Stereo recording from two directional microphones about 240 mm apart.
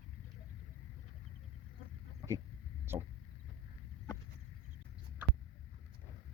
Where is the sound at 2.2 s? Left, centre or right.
Centre.